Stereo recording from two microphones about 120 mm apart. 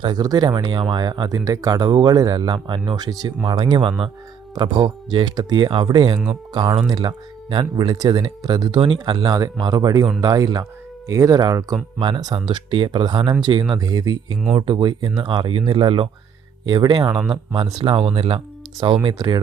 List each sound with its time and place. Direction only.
0.0 s speech: 35° right (ahead or behind)
9.2 s speech: 30° right (ahead or behind)
14.5 s speech: 45° right (ahead or behind)
15.3 s speech: 45° right (ahead or behind)
19.0 s speech: 35° right (ahead or behind)